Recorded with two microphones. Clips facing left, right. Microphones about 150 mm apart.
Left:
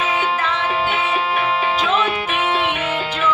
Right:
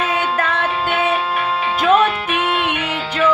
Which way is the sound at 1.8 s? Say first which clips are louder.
Right 9 dB; 55° right (ahead or behind).